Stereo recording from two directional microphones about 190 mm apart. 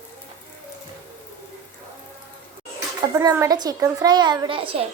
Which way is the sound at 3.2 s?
15° right (ahead or behind).